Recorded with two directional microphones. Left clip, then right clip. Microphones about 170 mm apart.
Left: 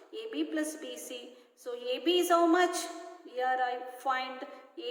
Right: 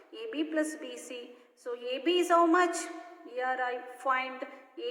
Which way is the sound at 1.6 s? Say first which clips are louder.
Even; 15° right (ahead or behind).